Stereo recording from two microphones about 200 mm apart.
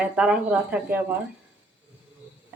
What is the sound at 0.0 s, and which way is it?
Speech, 5° right (ahead or behind).